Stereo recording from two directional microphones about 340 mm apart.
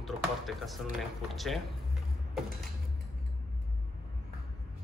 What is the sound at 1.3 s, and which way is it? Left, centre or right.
Speech, centre.